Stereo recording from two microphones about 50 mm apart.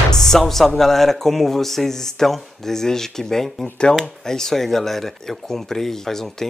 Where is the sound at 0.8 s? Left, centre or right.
Centre.